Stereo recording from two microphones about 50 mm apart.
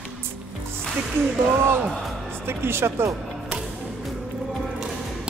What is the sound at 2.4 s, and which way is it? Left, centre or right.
Speech, right.